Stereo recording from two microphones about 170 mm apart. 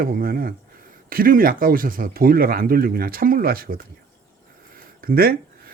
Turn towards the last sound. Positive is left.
turn(degrees=-60)  # may be behind; listen again after turning